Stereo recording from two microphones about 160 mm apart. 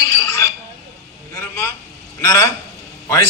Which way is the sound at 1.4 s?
15° left (ahead or behind).